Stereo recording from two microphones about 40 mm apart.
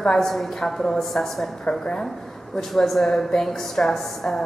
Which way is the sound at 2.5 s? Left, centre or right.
Centre.